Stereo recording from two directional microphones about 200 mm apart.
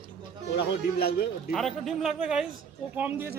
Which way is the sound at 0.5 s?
50° left (ahead or behind).